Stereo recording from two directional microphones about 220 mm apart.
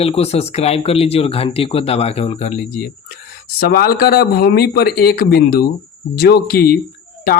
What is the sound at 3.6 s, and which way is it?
Speech, 45° left (ahead or behind).